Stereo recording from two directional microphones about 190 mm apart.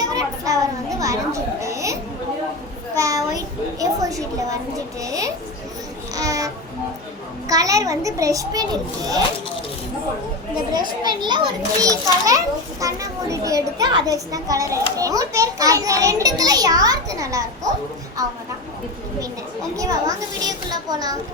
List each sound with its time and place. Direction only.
0.0 s a sound: 20° right (ahead or behind)
0.9 s children playing: 15° right (ahead or behind)
2.9 s a child's voice: 15° right (ahead or behind)
10.8 s a child's voice: 20° right (ahead or behind)
19.7 s a child's voice: 20° right (ahead or behind)